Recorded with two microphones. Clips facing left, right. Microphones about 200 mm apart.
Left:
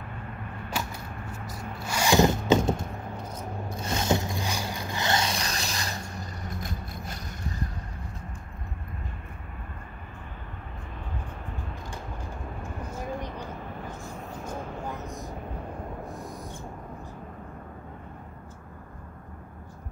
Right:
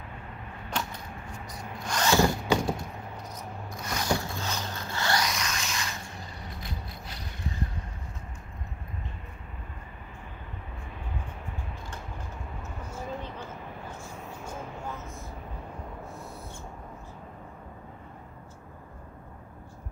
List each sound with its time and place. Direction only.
0.7 s a sound: 10° left (ahead or behind)
1.8 s zipper: 10° left (ahead or behind)
3.7 s zipper: 25° left (ahead or behind); by 7.3 s 45° left (ahead or behind)
12.6 s vehicle: 15° left (ahead or behind)
16.1 s owl: 15° left (ahead or behind)